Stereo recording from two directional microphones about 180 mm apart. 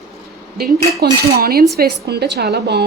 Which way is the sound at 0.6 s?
60° right (ahead or behind).